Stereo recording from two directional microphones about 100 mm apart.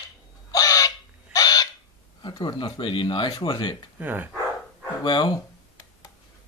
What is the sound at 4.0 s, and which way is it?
Speech, 20° right (ahead or behind).